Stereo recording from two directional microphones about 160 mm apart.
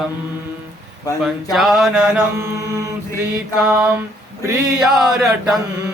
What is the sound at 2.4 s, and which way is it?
Mantra, 20° right (ahead or behind).